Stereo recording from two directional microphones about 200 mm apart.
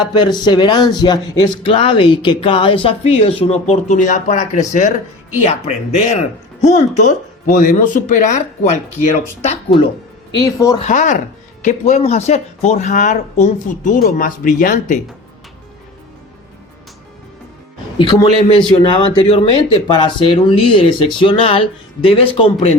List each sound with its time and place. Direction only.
0.0 s speech: 20° left (ahead or behind)
10.3 s speech: 15° left (ahead or behind)
10.8 s speech: 35° left (ahead or behind)
17.9 s speech: 25° left (ahead or behind)